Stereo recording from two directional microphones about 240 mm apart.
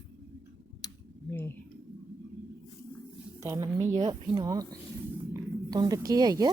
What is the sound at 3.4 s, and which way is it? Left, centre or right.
Speech, centre.